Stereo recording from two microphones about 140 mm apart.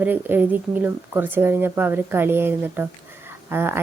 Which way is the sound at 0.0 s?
15° right (ahead or behind).